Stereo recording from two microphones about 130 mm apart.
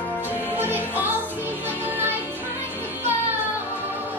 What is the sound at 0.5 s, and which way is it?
Music, 15° right (ahead or behind).